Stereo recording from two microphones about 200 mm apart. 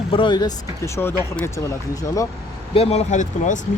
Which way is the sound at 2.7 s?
30° left (ahead or behind).